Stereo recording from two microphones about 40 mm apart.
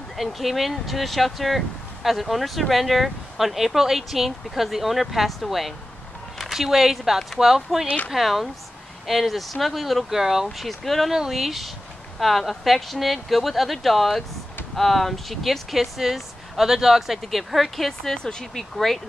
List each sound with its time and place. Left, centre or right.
0.2 s speech: centre
10.7 s speech: centre
11.1 s speech: centre